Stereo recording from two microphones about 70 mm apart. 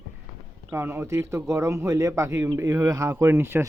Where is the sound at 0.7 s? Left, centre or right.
Right.